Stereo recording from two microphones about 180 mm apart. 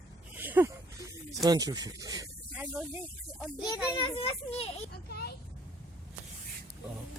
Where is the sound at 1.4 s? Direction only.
20° right (ahead or behind).